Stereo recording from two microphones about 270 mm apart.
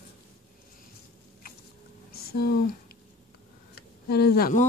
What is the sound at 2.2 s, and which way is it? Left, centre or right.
Speech, left.